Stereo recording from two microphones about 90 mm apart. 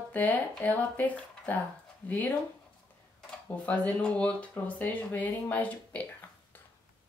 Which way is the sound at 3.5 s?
15° left (ahead or behind).